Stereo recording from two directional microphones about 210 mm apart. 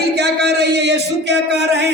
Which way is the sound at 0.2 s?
55° right (ahead or behind).